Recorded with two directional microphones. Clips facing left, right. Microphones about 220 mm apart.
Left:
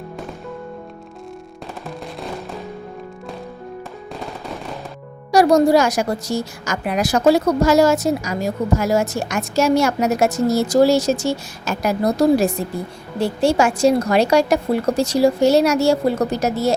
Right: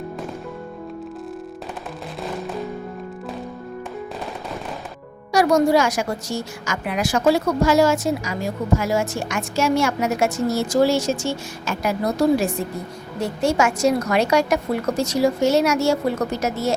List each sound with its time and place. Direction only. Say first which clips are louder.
5.3 s a woman's voice: left 3 dB; 35° left (ahead or behind)